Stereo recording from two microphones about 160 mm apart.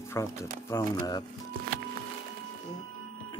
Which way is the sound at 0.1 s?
20° left (ahead or behind).